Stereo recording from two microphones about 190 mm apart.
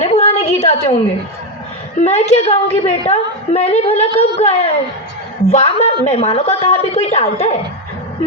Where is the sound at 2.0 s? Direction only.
35° left (ahead or behind).